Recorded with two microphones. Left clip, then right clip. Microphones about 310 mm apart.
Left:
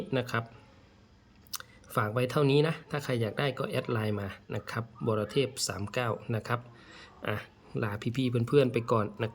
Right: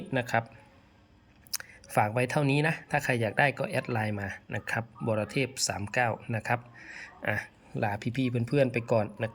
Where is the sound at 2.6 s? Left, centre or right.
Centre.